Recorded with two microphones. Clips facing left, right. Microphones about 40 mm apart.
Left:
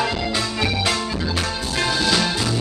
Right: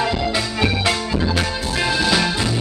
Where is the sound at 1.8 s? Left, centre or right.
Centre.